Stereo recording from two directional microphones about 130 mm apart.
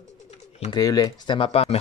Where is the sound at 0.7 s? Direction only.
30° left (ahead or behind); by 1.8 s 50° left (ahead or behind).